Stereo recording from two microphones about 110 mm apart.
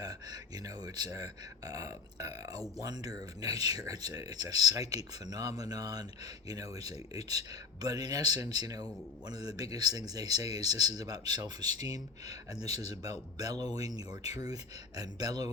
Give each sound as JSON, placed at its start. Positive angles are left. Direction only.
{"t": 0.0, "sound": "speech", "side_deg": -35}